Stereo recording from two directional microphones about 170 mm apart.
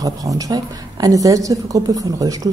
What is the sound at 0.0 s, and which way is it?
A woman's voice, 20° right (ahead or behind).